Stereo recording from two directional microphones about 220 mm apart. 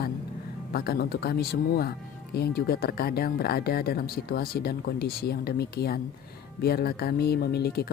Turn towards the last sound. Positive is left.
turn(degrees=45)  # may be behind; listen again after turning